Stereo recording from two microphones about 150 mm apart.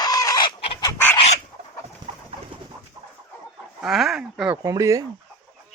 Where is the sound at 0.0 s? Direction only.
25° left (ahead or behind).